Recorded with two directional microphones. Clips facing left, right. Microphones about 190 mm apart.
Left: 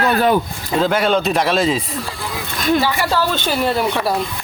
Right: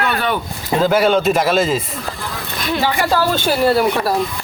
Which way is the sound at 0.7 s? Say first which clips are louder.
Right 2 dB; 5° right (ahead or behind).